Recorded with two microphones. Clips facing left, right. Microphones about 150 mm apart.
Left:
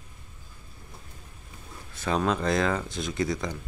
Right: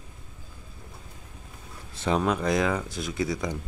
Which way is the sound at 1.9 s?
25° right (ahead or behind).